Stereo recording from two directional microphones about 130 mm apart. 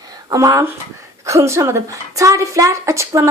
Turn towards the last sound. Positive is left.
turn(degrees=-25)  # may be behind; listen again after turning